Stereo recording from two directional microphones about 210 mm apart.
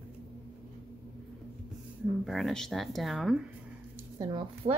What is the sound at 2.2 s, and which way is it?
A woman's voice, centre (ahead or behind).